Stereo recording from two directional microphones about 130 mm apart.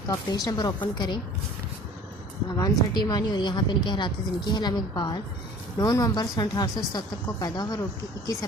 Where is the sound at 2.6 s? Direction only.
30° left (ahead or behind).